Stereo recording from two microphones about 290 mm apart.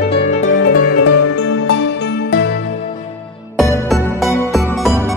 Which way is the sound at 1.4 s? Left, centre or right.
Left.